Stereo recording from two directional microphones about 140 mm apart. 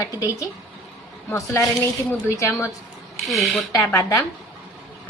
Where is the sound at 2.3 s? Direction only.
20° left (ahead or behind).